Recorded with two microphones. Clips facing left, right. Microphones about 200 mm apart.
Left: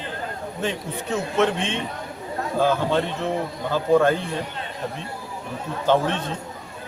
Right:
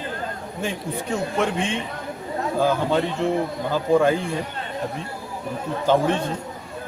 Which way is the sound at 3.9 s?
10° right (ahead or behind).